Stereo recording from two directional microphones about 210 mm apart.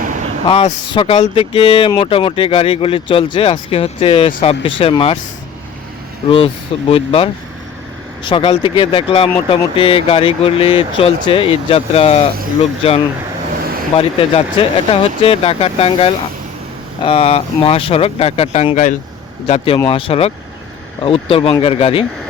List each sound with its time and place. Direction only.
0.0 s a sound: 35° right (ahead or behind)
0.4 s speech: 25° left (ahead or behind)
6.2 s speech: 25° left (ahead or behind)